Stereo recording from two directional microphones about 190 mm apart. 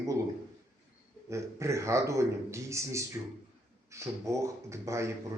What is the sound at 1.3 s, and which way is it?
A man's voice, 15° right (ahead or behind).